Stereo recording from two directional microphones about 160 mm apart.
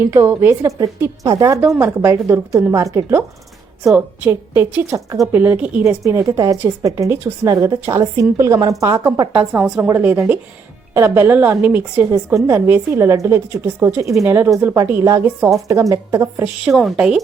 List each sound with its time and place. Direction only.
0.0 s a woman's voice: 15° right (ahead or behind)
9.3 s a woman's voice: 5° right (ahead or behind)
16.4 s speech: 5° right (ahead or behind)